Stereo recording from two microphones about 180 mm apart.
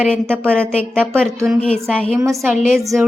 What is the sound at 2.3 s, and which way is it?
Speech, 15° right (ahead or behind).